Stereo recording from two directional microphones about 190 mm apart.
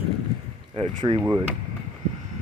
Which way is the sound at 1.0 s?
20° right (ahead or behind).